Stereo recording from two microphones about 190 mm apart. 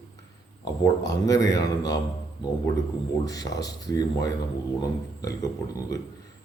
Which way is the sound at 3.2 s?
20° left (ahead or behind).